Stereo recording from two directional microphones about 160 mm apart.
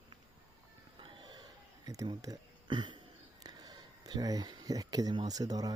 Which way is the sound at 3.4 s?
25° right (ahead or behind).